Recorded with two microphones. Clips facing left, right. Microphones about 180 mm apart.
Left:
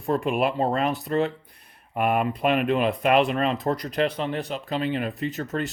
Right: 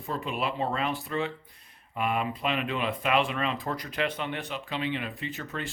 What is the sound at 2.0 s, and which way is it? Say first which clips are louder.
Speech: left 6 dB; 55° left (ahead or behind).